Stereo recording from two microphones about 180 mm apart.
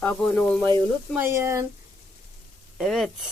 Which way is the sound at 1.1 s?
15° right (ahead or behind).